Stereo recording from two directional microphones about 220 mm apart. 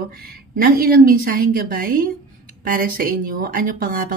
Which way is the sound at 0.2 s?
40° right (ahead or behind).